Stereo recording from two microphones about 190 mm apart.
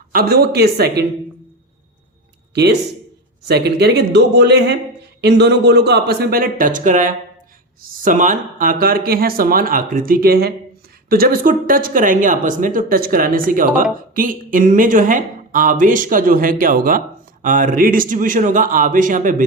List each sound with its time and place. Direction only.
0.1 s a man's voice: 50° right (ahead or behind)
3.4 s a man's voice: 60° right (ahead or behind); by 19.5 s 45° right (ahead or behind)